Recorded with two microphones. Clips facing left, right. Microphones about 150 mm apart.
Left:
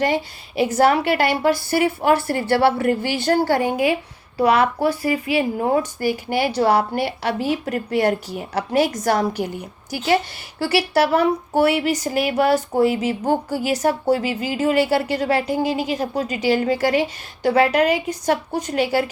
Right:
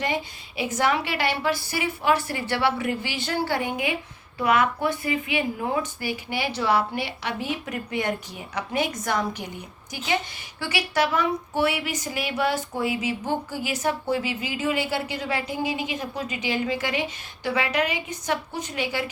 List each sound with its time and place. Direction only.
0.0 s speech: 45° left (ahead or behind)
10.6 s speech: 35° left (ahead or behind)